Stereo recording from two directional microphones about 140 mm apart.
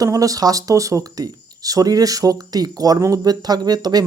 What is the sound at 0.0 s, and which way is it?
Speech, 25° right (ahead or behind).